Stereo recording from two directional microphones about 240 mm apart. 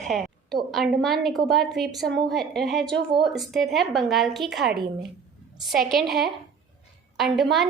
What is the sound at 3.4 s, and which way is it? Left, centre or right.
A woman's voice, centre.